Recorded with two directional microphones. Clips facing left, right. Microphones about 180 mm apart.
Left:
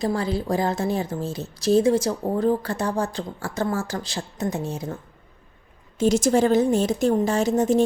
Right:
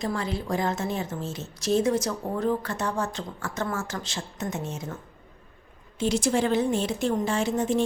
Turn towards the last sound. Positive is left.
turn(degrees=40)  # may be behind; listen again after turning